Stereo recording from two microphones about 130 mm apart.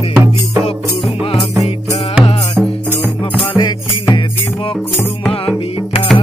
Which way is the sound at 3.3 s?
40° left (ahead or behind).